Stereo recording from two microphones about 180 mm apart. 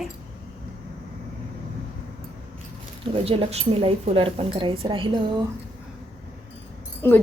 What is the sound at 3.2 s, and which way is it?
A woman's voice, 30° right (ahead or behind).